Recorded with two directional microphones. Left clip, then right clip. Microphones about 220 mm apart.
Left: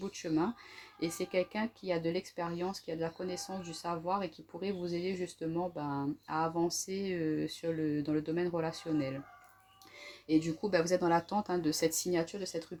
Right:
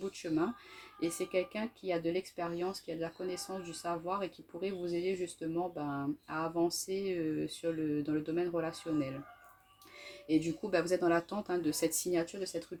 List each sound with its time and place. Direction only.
0.9 s speech: 40° left (ahead or behind)
10.2 s speech: 40° left (ahead or behind)